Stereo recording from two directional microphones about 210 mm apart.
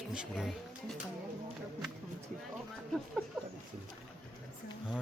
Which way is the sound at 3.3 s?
Centre (ahead or behind).